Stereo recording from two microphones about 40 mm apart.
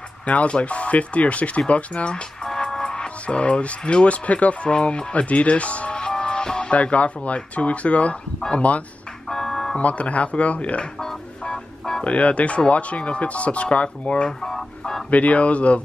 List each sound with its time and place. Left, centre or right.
0.3 s speech: left
2.4 s speech: centre; by 4.6 s left
4.6 s speech: left
5.9 s music: left
6.7 s speech: left
9.3 s music: centre
9.8 s speech: left
11.4 s a sound: centre
12.0 s speech: left
14.4 s a sound: centre
15.0 s speech: left